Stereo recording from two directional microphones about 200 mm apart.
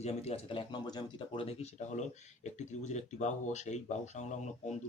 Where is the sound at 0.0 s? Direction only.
30° left (ahead or behind).